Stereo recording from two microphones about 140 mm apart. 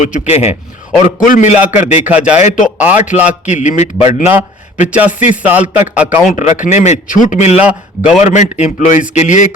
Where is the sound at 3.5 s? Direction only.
55° left (ahead or behind).